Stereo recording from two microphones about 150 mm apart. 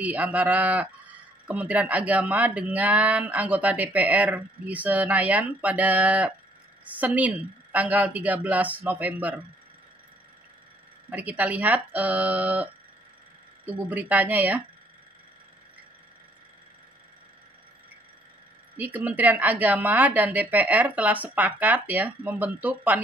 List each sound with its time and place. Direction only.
0.0 s speech: 10° right (ahead or behind)
11.1 s speech: 10° right (ahead or behind)
13.7 s speech: 10° right (ahead or behind)
18.8 s speech: 10° right (ahead or behind)